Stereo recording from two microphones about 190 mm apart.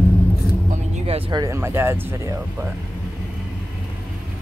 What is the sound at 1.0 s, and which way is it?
Music, 30° right (ahead or behind).